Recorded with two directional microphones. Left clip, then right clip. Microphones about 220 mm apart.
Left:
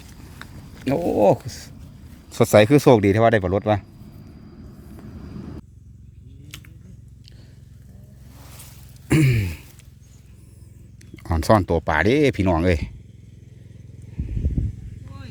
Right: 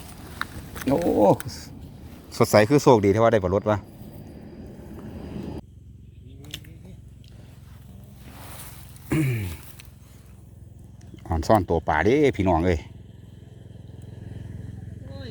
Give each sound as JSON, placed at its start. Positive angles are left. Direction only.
{"t": 0.9, "sound": "speech", "side_deg": 30}
{"t": 1.5, "sound": "speech", "side_deg": 50}
{"t": 2.3, "sound": "speech", "side_deg": 25}
{"t": 9.0, "sound": "a sound", "side_deg": 50}
{"t": 11.2, "sound": "speech", "side_deg": 35}